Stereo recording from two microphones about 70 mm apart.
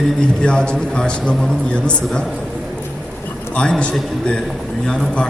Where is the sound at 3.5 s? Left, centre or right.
Centre.